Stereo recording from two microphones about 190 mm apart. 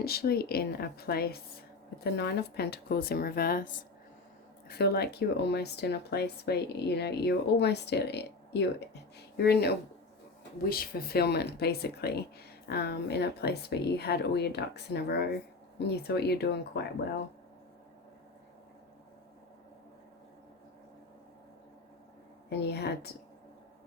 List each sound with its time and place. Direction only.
0.0 s speech: 55° left (ahead or behind)
4.7 s speech: 55° left (ahead or behind)
22.4 s speech: 60° left (ahead or behind)